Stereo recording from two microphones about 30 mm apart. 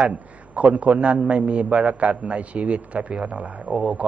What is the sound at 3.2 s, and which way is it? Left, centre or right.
Speech, right.